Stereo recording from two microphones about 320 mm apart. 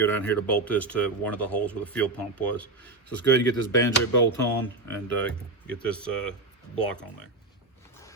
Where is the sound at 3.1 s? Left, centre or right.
Left.